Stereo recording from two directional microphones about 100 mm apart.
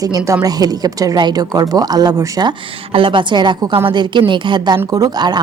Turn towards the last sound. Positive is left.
turn(degrees=-45)  # may be behind; listen again after turning